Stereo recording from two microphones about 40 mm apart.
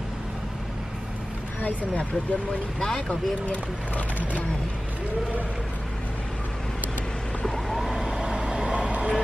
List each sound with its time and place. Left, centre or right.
1.6 s speech: left
3.1 s speech: left
7.4 s vehicle: centre
8.0 s vehicle: centre